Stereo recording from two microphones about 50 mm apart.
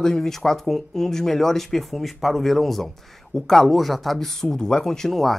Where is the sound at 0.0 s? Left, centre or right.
Centre.